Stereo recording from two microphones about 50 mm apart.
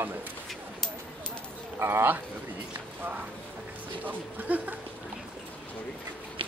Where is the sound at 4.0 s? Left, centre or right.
Right.